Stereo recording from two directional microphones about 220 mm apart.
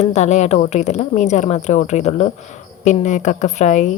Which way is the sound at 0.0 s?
30° left (ahead or behind).